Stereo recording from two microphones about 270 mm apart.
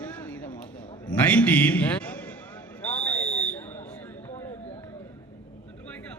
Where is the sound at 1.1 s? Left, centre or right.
Centre.